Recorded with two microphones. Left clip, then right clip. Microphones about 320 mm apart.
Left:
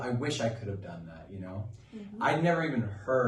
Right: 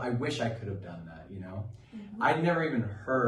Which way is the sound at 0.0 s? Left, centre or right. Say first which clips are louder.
Even; centre.